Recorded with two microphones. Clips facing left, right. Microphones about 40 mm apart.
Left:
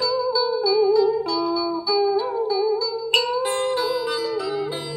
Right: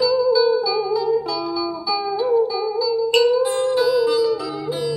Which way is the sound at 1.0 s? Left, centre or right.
Centre.